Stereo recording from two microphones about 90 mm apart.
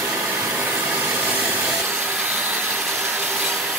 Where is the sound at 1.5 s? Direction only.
20° right (ahead or behind).